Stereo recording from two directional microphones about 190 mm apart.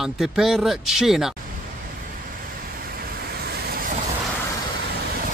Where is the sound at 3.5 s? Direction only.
55° right (ahead or behind).